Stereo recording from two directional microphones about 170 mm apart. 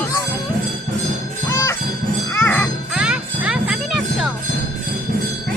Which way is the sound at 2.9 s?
5° right (ahead or behind).